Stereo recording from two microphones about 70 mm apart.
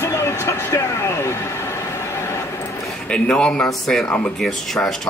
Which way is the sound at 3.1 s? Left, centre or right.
Centre.